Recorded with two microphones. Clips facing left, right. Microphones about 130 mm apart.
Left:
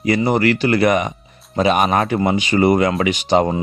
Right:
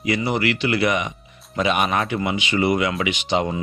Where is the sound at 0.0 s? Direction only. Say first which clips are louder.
Left 6 dB; 40° left (ahead or behind).